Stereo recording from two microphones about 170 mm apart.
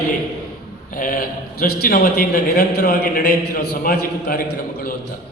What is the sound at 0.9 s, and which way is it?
A man's voice, 55° left (ahead or behind).